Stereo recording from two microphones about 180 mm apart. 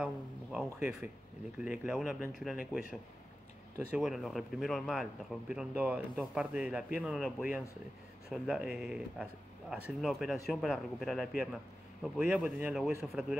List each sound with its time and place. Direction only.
0.0 s speech: 5° right (ahead or behind)
1.6 s speech: 5° right (ahead or behind)